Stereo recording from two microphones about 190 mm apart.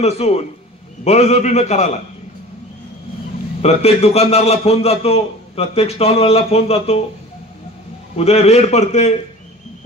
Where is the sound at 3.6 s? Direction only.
35° left (ahead or behind).